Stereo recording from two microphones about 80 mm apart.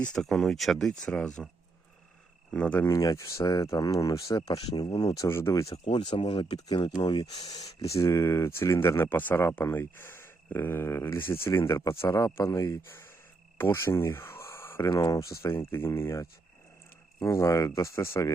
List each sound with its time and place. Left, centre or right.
0.0 s speech: centre
2.5 s speech: centre
2.8 s speech: left
4.4 s speech: left
5.0 s speech: left
5.3 s speech: left
5.9 s speech: left
6.7 s speech: left
14.8 s speech: left
17.2 s speech: left